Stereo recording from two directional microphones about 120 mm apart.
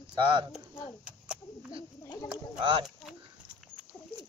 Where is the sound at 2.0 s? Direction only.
30° left (ahead or behind).